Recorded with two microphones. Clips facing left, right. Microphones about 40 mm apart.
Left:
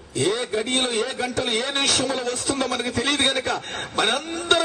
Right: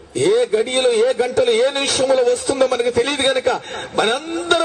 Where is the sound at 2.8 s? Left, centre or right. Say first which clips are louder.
Right 5 dB; centre.